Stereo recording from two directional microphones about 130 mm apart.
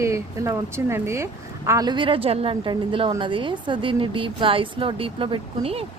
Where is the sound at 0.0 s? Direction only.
20° right (ahead or behind).